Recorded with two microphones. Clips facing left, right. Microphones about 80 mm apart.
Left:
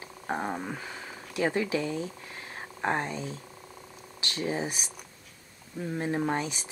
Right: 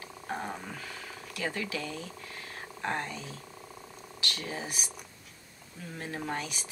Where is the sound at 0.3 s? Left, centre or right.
Left.